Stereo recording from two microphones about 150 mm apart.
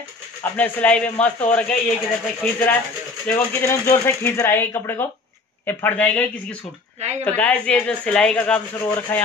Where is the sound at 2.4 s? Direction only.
10° left (ahead or behind).